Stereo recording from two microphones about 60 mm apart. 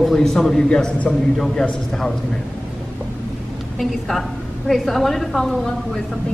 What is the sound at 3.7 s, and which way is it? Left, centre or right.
A woman's voice, centre.